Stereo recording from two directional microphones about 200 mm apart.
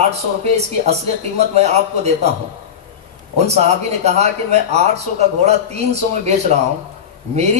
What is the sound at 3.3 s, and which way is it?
Speech, 35° right (ahead or behind).